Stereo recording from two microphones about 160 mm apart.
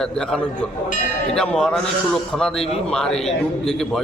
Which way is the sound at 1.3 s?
5° left (ahead or behind).